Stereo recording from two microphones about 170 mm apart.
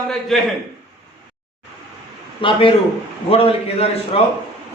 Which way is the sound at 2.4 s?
30° left (ahead or behind).